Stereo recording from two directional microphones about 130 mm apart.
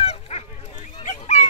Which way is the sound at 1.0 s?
60° left (ahead or behind).